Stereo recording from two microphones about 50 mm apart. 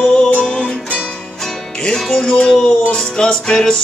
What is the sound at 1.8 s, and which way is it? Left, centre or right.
Music, centre.